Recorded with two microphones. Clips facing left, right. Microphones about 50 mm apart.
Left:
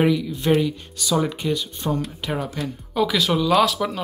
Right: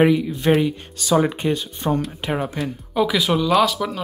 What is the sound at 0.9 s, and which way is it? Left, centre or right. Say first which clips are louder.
Speech: right 5 dB; right.